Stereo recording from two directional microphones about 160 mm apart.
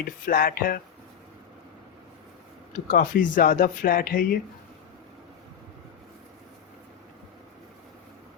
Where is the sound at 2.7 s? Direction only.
60° left (ahead or behind).